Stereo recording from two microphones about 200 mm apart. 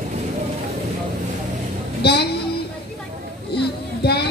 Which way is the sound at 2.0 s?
55° left (ahead or behind).